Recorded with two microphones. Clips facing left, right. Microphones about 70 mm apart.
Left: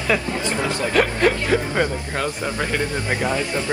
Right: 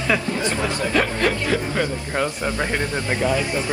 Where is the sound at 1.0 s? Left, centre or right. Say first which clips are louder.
Left 3 dB; left.